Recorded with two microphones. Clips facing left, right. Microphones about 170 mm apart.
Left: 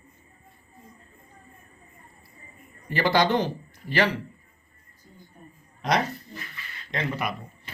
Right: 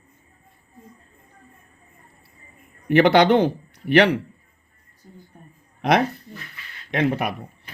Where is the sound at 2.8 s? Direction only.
65° right (ahead or behind).